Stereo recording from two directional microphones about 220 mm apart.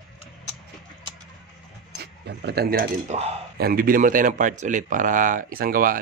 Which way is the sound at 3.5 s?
45° right (ahead or behind).